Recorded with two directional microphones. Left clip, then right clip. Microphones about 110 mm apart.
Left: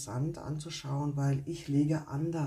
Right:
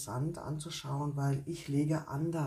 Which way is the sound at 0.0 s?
20° left (ahead or behind).